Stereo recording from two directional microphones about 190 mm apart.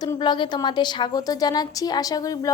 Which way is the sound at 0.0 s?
20° left (ahead or behind).